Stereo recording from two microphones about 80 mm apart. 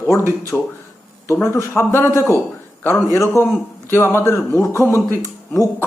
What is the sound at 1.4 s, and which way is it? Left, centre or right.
A man's voice, left.